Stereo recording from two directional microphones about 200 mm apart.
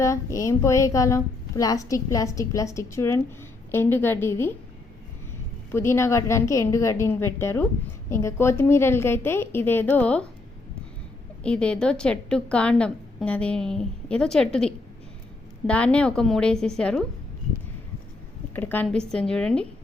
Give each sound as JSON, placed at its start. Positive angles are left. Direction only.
{"t": 0.0, "sound": "speech", "side_deg": 15}
{"t": 5.7, "sound": "speech", "side_deg": 15}
{"t": 11.4, "sound": "a woman's voice", "side_deg": 5}
{"t": 18.5, "sound": "a woman's voice", "side_deg": 10}